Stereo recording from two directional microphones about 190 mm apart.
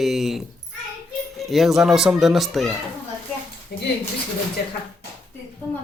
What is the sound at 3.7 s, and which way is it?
Speech, 60° left (ahead or behind).